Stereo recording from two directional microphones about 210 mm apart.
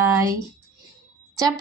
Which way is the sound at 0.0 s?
15° right (ahead or behind).